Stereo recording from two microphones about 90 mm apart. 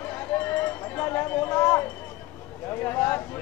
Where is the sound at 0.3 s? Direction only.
20° left (ahead or behind).